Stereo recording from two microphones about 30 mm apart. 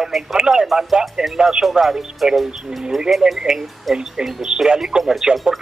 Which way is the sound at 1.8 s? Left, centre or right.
Centre.